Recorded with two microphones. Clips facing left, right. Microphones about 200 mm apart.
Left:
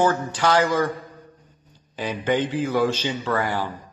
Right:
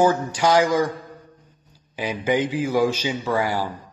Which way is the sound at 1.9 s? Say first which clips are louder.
Right 1 dB; 10° right (ahead or behind).